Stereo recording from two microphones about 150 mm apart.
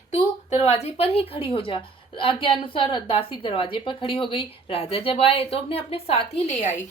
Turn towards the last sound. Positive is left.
turn(degrees=40)  # may be behind; listen again after turning